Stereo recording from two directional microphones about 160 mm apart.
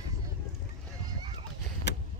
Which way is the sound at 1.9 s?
90° left.